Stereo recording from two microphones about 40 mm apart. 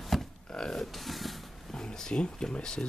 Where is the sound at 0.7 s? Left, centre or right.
Centre.